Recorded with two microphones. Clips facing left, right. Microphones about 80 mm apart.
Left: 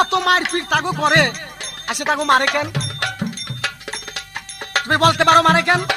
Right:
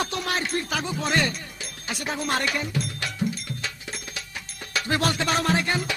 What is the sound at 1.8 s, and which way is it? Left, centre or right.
Music, left.